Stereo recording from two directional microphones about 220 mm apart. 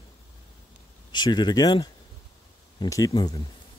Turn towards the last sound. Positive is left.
turn(degrees=15)  # may be behind; listen again after turning